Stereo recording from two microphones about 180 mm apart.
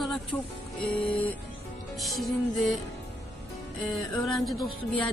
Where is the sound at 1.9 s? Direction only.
Centre (ahead or behind).